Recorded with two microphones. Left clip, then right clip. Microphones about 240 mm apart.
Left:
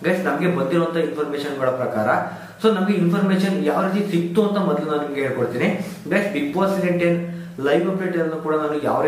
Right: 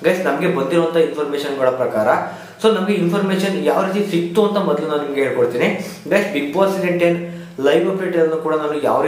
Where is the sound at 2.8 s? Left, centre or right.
Centre.